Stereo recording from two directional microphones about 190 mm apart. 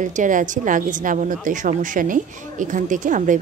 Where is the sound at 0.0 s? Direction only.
40° right (ahead or behind).